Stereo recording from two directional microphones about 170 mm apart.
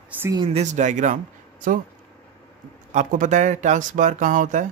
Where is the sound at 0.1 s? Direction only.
10° right (ahead or behind).